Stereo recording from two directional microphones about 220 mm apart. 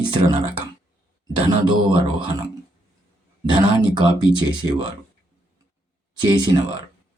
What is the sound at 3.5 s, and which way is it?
Speech, 20° right (ahead or behind).